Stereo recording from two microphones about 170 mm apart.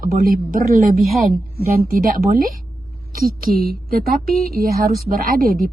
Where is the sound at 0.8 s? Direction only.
Centre (ahead or behind).